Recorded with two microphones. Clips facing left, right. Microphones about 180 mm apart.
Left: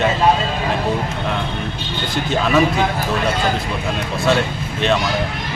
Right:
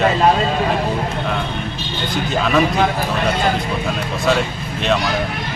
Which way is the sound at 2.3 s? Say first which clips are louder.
Left 1 dB; centre (ahead or behind).